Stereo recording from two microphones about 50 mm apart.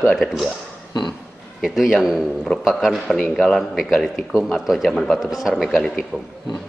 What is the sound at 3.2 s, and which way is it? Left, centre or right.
Speech, centre.